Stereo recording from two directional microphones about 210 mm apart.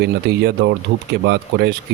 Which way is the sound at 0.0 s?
50° right (ahead or behind).